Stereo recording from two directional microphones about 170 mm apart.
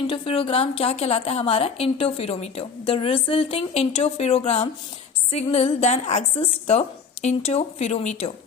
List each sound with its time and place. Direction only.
0.1 s a woman's voice: 35° left (ahead or behind)